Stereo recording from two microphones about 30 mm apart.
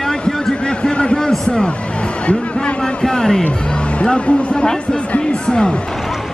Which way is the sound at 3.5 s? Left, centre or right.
Left.